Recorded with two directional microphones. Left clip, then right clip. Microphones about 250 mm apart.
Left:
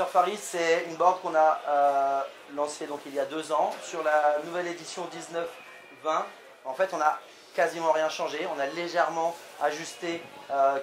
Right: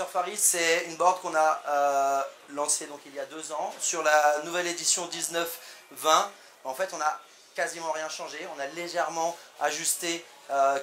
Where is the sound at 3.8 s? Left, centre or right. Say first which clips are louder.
Right 5 dB; right.